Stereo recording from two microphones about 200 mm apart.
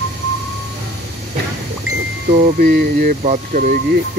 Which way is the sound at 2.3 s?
45° right (ahead or behind).